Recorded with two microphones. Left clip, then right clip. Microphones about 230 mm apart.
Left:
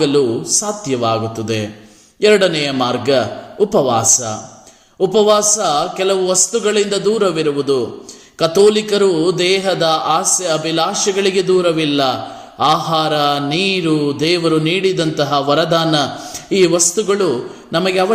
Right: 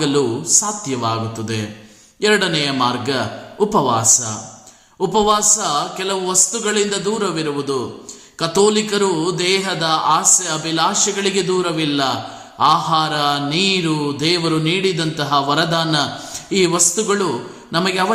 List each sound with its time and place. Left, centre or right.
0.6 s speech: centre
5.1 s speech: centre